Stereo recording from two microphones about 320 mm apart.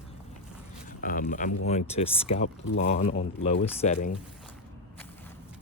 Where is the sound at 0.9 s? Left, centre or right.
Left.